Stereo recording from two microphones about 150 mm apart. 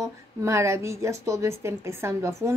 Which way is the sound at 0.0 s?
20° right (ahead or behind).